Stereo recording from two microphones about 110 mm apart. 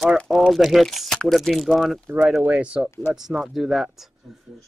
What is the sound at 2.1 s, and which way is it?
A man's voice, 15° right (ahead or behind).